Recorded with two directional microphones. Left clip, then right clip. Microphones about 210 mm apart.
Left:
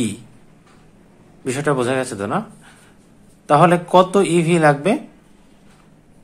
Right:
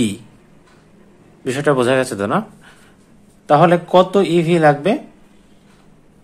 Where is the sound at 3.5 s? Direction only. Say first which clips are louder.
Right 1 dB; 5° right (ahead or behind).